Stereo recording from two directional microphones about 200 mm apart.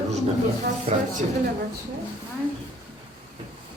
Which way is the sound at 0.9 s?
30° right (ahead or behind).